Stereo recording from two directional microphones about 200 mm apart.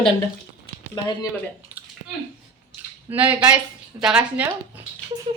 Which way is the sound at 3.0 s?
10° right (ahead or behind).